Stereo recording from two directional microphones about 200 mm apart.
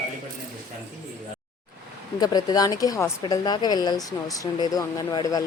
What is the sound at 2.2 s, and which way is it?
A woman's voice, 20° left (ahead or behind).